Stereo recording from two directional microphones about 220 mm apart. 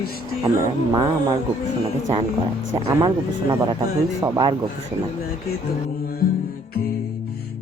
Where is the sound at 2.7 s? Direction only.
15° right (ahead or behind).